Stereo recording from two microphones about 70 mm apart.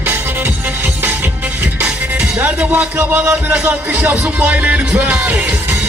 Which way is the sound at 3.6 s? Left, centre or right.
Right.